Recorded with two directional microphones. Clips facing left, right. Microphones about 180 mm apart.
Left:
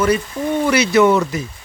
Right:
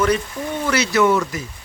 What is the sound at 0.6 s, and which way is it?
Speech, 15° left (ahead or behind).